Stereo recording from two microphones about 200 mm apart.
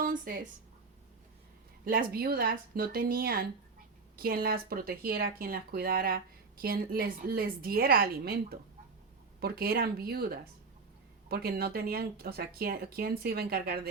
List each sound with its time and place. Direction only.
0.0 s speech: 45° right (ahead or behind)
1.8 s speech: 45° right (ahead or behind)